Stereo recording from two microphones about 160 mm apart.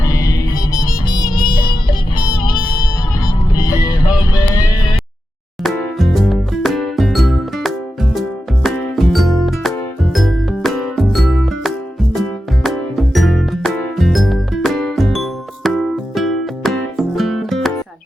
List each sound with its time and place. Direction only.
0.0 s music: 20° left (ahead or behind)
5.6 s music: centre (ahead or behind)